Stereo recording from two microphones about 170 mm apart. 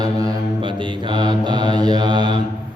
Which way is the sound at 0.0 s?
25° right (ahead or behind).